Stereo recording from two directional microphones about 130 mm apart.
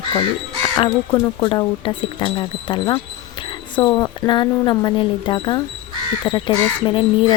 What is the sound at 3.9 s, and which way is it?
Speech, 35° left (ahead or behind).